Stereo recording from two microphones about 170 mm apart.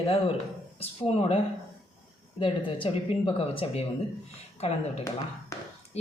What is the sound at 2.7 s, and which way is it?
Speech, 30° left (ahead or behind).